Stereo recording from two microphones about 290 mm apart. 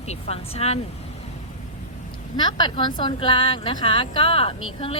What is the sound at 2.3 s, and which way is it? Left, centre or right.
Speech, centre.